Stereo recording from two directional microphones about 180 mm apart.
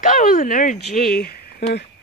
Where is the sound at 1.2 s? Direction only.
60° left (ahead or behind).